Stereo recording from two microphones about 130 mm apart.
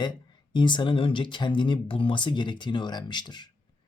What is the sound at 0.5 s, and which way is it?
Speech, 35° left (ahead or behind).